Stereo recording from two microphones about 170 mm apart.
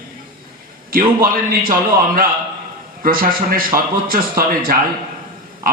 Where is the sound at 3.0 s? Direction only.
55° right (ahead or behind).